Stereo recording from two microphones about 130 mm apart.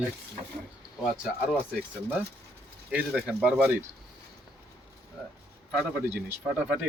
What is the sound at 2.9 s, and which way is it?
Speech, 5° right (ahead or behind).